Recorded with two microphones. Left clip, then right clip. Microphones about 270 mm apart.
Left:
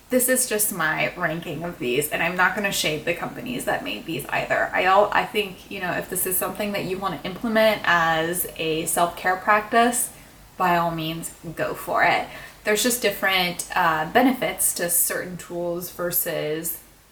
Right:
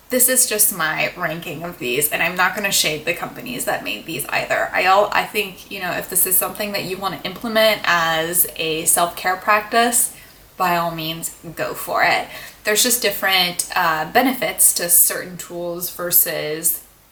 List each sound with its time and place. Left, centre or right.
0.1 s speech: centre
15.6 s speech: centre
16.0 s speech: centre